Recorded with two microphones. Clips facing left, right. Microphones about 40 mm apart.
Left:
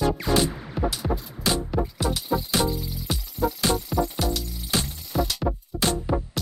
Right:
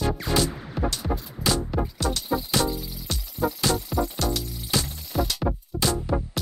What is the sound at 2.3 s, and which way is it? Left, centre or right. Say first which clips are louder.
Music: left 1 dB; centre.